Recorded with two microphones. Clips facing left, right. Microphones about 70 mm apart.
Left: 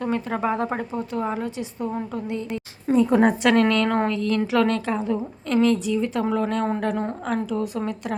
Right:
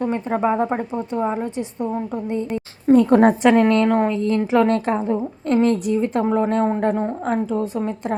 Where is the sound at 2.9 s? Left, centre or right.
Right.